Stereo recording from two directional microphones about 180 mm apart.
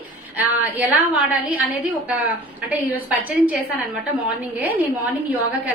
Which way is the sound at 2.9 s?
10° right (ahead or behind).